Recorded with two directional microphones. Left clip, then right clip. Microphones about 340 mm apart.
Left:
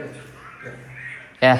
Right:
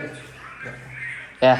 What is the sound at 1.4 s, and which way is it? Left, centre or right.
Speech, centre.